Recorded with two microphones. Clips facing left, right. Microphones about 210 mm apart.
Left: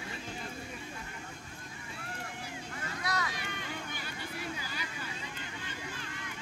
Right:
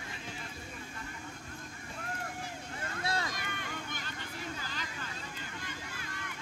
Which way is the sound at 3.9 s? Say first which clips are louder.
Left 2 dB; 10° left (ahead or behind).